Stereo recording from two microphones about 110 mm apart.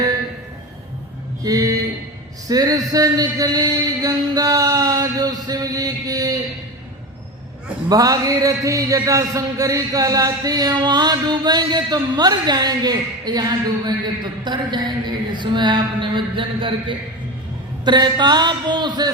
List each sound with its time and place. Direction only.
1.5 s a man's voice: 35° right (ahead or behind)
7.9 s a man's voice: 35° right (ahead or behind); by 16.7 s 50° right (ahead or behind)
17.8 s a man's voice: 40° right (ahead or behind)